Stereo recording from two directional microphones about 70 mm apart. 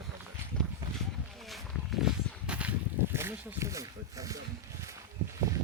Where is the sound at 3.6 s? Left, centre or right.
Right.